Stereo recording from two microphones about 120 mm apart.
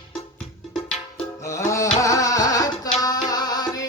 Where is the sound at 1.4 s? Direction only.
25° left (ahead or behind).